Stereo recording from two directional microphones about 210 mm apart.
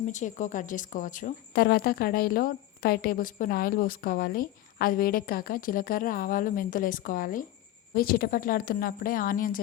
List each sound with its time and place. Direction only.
0.0 s a woman's voice: 35° left (ahead or behind)